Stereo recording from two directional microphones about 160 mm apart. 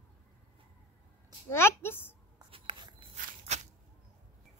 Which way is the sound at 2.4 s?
35° right (ahead or behind).